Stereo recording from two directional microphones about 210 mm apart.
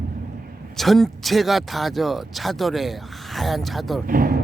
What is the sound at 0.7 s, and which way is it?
Speech, centre (ahead or behind).